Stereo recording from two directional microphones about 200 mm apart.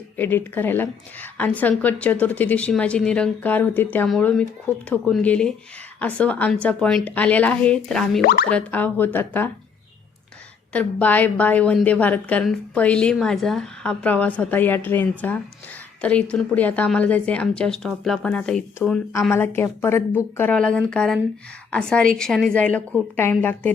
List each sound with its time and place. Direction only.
0.2 s a woman's voice: 10° left (ahead or behind)
8.2 s speech: 50° left (ahead or behind)
8.4 s a woman's voice: 5° left (ahead or behind)
10.7 s a woman's voice: 5° left (ahead or behind)